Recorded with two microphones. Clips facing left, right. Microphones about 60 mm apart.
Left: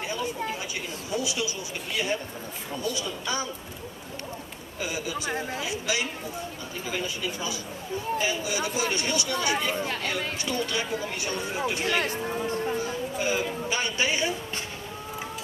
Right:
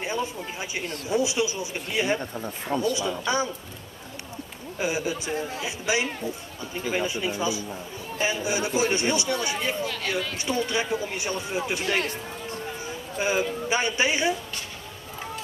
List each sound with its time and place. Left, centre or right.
0.0 s speech: right
4.7 s speech: right
9.8 s speech: left
10.4 s speech: right
12.8 s a sound: right
13.7 s speech: right